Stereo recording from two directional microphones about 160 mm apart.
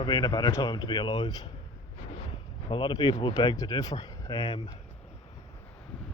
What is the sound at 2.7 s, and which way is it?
Speech, 30° left (ahead or behind).